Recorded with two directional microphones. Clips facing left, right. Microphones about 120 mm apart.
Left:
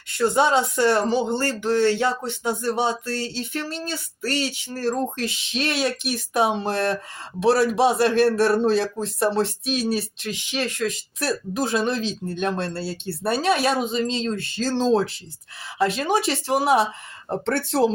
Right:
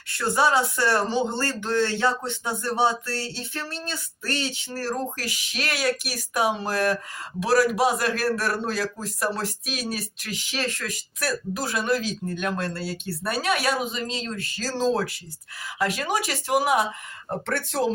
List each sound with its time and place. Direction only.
0.2 s speech: 20° left (ahead or behind)